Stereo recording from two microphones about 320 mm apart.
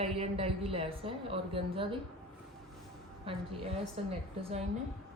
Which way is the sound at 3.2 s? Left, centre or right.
Centre.